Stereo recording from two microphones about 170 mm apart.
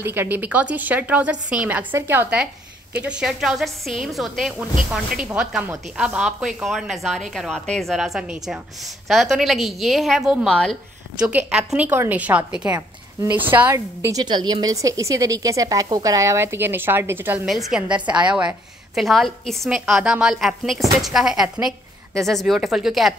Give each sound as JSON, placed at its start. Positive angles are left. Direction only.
{"t": 0.0, "sound": "a woman's voice", "side_deg": -15}
{"t": 17.5, "sound": "a woman's voice", "side_deg": 0}
{"t": 18.0, "sound": "a woman's voice", "side_deg": -25}
{"t": 18.3, "sound": "a woman's voice", "side_deg": -5}